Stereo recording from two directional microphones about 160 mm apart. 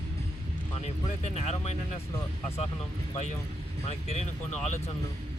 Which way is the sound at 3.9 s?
45° left (ahead or behind).